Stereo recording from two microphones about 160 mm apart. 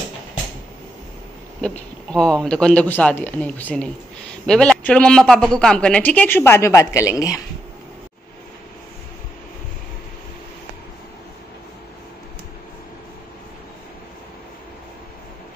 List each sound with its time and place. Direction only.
2.1 s speech: 5° left (ahead or behind); by 7.4 s 20° left (ahead or behind)